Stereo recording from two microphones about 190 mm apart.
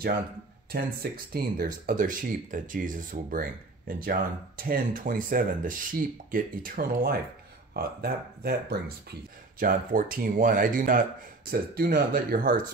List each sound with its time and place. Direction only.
0.7 s speech: 55° right (ahead or behind)